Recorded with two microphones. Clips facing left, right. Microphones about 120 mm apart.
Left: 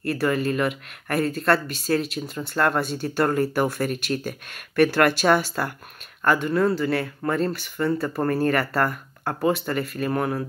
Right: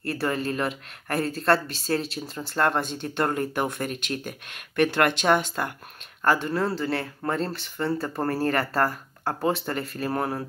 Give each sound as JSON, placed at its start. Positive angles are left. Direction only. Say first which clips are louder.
{"t": 0.0, "sound": "speech", "louder": "left 4 dB", "side_deg": -30}